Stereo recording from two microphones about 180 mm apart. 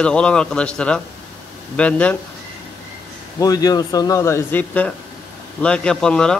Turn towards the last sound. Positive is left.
turn(degrees=5)  # may be behind; listen again after turning